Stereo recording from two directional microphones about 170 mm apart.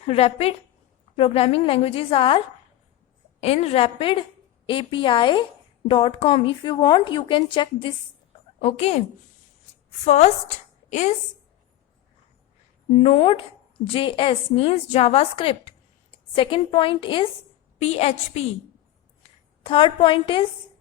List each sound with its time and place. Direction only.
0.0 s a woman's voice: 40° left (ahead or behind)
3.4 s a woman's voice: 35° left (ahead or behind)
10.0 s a woman's voice: 40° left (ahead or behind)
12.9 s a woman's voice: 40° left (ahead or behind)
19.6 s a woman's voice: 30° left (ahead or behind)